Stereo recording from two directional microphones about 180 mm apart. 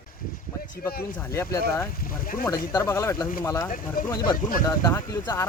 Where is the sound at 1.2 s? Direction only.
15° left (ahead or behind).